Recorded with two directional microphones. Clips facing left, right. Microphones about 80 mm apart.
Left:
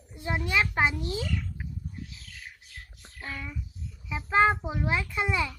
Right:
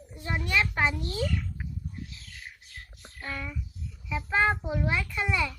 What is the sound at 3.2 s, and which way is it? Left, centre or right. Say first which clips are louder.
A child's voice: right 1 dB; centre.